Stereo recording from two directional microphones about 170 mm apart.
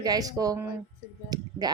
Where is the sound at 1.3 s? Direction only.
25° right (ahead or behind).